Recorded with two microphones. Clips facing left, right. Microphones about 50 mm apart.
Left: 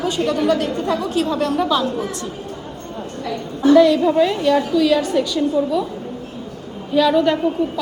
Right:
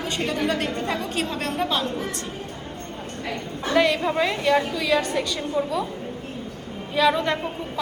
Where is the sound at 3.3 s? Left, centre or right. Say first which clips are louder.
Left 13 dB; right.